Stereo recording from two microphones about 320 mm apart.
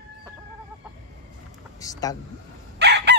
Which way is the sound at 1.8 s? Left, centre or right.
Centre.